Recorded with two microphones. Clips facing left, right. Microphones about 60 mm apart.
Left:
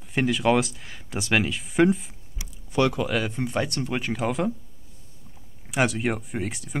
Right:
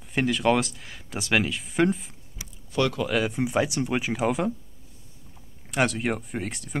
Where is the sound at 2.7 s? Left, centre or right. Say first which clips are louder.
Left 2 dB; centre.